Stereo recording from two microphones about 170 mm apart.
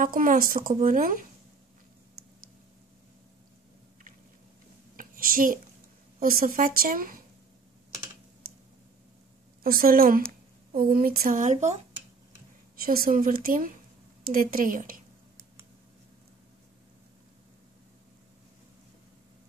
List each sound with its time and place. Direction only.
0.0 s speech: 55° right (ahead or behind)
4.9 s a sound: 55° right (ahead or behind)
6.1 s a woman's voice: 55° right (ahead or behind)
9.6 s a woman's voice: 60° right (ahead or behind)
12.8 s a woman's voice: 60° right (ahead or behind)